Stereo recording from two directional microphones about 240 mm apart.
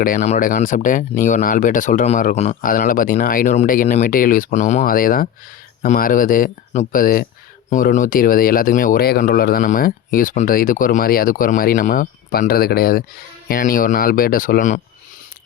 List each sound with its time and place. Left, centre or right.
0.0 s speech: left